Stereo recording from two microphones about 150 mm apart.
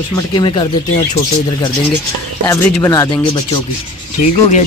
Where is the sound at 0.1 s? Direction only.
30° left (ahead or behind).